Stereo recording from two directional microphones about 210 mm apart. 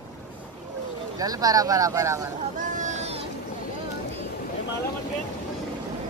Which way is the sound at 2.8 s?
35° right (ahead or behind).